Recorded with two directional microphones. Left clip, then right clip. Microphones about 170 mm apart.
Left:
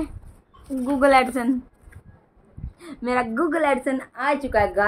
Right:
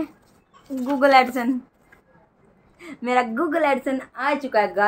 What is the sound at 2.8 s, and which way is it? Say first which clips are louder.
A woman's voice: right 2 dB; centre (ahead or behind).